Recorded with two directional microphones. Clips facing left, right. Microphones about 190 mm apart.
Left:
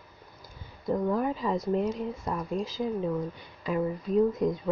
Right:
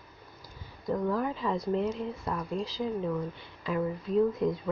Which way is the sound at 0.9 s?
20° left (ahead or behind).